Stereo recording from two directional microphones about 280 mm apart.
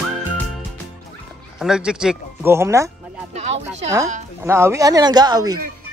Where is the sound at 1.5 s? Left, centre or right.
Centre.